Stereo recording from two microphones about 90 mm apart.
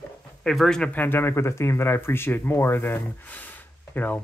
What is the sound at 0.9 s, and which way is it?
Speech, 25° left (ahead or behind).